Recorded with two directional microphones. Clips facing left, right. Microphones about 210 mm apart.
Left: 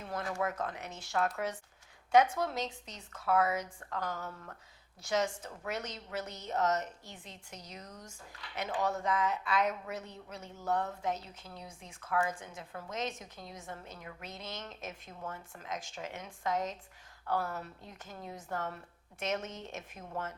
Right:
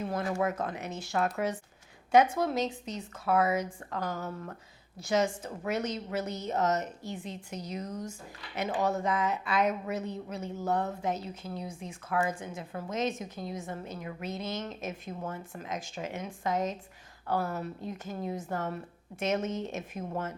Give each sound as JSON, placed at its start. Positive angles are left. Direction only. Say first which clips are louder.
{"t": 0.0, "sound": "a woman's voice", "louder": "right 5 dB", "side_deg": -10}
{"t": 4.3, "sound": "speech", "louder": "right 8 dB", "side_deg": -20}
{"t": 4.9, "sound": "a woman's voice", "louder": "right 4 dB", "side_deg": -5}